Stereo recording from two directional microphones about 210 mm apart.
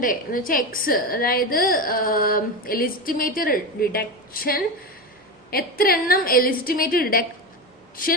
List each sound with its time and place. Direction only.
0.0 s a woman's voice: 40° left (ahead or behind)